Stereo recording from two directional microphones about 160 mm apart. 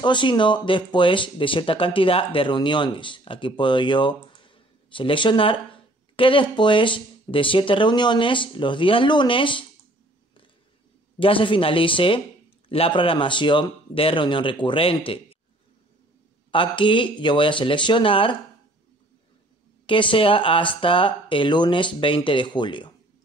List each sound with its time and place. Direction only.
0.0 s speech: 30° left (ahead or behind)
11.1 s speech: 35° left (ahead or behind)
16.5 s speech: 30° left (ahead or behind)
19.9 s speech: 30° left (ahead or behind)